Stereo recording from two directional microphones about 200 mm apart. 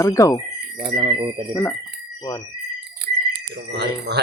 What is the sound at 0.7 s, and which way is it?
Speech, 25° right (ahead or behind).